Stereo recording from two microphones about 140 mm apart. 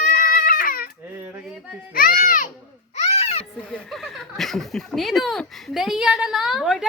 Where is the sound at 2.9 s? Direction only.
50° left (ahead or behind).